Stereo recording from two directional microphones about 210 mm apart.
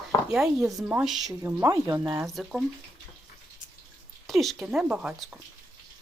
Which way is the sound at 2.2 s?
Centre (ahead or behind).